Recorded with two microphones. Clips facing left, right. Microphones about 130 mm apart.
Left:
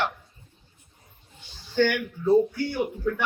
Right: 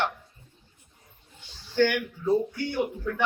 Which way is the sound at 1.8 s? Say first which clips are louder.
Even; 15° right (ahead or behind).